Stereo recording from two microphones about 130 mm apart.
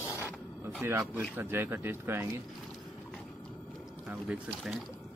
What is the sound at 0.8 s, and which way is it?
A man's voice, 20° right (ahead or behind).